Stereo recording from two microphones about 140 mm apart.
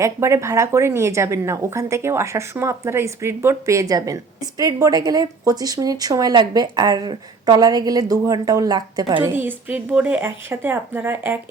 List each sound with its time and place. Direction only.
0.0 s a woman's voice: 20° right (ahead or behind)
9.3 s speech: 15° right (ahead or behind)